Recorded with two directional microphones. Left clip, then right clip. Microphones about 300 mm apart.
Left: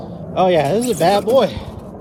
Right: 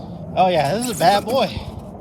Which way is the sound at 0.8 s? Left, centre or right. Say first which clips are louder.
Left 1 dB; centre.